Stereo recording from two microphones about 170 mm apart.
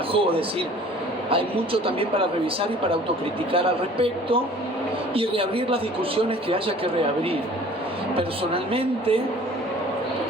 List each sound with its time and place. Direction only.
0.1 s speech: 35° right (ahead or behind)